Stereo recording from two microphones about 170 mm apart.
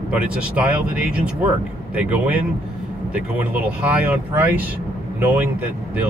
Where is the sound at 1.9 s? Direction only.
10° right (ahead or behind).